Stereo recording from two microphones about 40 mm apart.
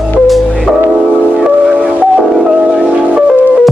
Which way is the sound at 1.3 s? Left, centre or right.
Right.